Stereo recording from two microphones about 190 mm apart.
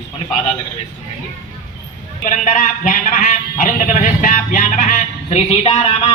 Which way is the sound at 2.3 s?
45° left (ahead or behind).